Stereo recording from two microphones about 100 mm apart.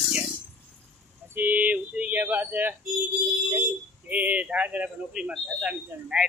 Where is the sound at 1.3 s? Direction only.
20° right (ahead or behind).